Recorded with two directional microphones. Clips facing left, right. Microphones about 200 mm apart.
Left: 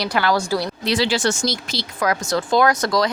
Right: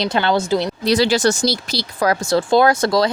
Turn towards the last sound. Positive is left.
turn(degrees=-30)  # may be behind; listen again after turning